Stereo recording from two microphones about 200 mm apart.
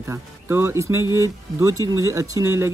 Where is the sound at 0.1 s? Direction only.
10° right (ahead or behind).